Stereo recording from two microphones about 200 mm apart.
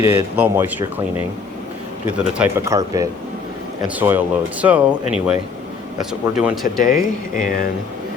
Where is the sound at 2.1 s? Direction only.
5° right (ahead or behind).